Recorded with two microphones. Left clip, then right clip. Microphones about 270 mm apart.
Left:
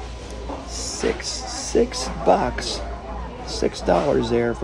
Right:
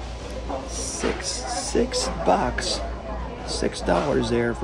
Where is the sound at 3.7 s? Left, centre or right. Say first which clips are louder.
Left 4 dB; left.